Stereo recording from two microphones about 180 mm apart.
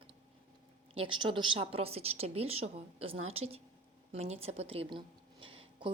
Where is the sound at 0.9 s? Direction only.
30° right (ahead or behind).